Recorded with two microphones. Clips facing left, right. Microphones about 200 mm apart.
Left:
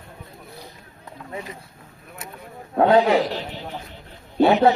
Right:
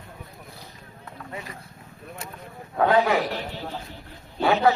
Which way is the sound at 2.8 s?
20° left (ahead or behind).